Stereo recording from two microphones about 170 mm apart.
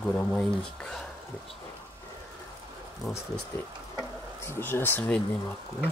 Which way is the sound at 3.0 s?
10° left (ahead or behind).